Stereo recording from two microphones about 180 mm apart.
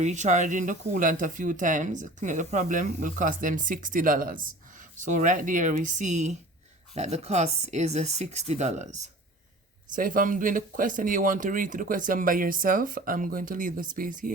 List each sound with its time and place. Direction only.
0.0 s speech: 40° right (ahead or behind)